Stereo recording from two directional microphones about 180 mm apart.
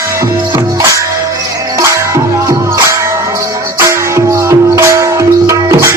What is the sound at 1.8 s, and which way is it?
Music, 15° right (ahead or behind).